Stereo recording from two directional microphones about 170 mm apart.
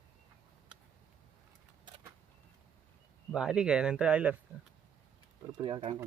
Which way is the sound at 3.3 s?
5° right (ahead or behind).